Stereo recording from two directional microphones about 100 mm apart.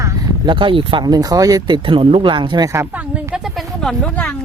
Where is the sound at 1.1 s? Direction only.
40° right (ahead or behind).